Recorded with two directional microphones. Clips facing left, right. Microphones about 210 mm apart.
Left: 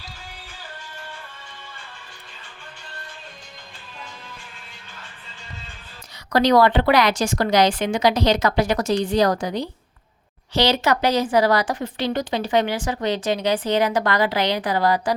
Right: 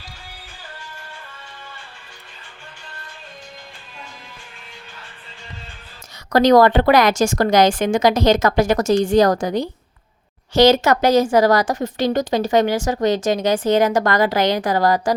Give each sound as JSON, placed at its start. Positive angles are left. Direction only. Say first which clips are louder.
{"t": 6.3, "sound": "speech", "louder": "right 4 dB", "side_deg": -45}